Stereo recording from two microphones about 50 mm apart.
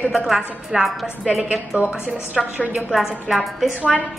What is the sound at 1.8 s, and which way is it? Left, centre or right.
Speech, right.